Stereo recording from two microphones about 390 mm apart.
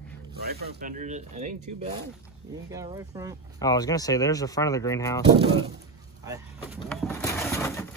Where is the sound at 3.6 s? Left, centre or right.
Centre.